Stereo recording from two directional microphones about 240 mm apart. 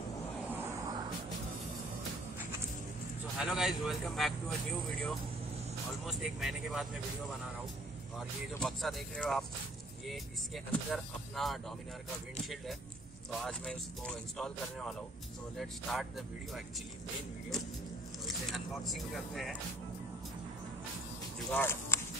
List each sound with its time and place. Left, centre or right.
0.5 s a sound: centre
3.3 s speech: centre
6.0 s speech: centre
8.5 s speech: centre
13.4 s speech: centre
18.2 s speech: centre
21.5 s speech: centre